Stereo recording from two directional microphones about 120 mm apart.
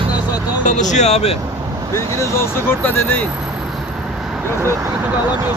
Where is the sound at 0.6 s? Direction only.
90° left; by 1.3 s 65° left (ahead or behind).